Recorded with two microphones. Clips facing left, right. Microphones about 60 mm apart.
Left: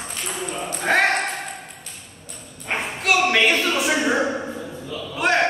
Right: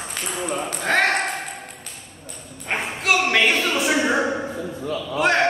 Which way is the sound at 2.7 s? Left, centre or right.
Centre.